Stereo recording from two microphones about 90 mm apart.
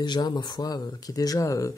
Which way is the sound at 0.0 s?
55° left (ahead or behind).